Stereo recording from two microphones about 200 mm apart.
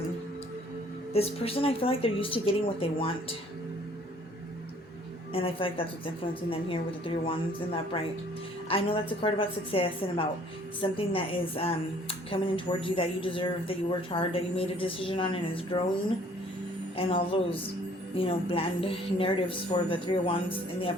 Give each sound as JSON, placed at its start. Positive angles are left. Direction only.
{"t": 1.1, "sound": "a woman's voice", "side_deg": 30}
{"t": 5.3, "sound": "a woman's voice", "side_deg": 30}